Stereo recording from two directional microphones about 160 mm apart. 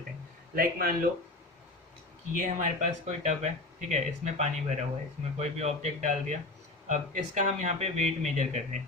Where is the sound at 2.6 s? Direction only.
45° right (ahead or behind).